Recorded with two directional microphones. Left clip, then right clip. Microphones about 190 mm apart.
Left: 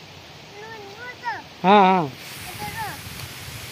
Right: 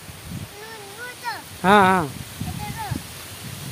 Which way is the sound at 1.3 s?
15° right (ahead or behind).